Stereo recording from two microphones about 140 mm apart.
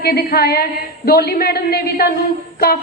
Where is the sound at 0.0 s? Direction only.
90° left.